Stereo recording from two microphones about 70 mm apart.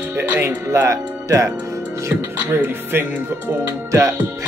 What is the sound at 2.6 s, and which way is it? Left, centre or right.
Speech, right.